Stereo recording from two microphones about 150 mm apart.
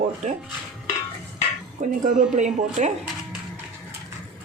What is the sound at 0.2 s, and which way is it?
Speech, 50° right (ahead or behind).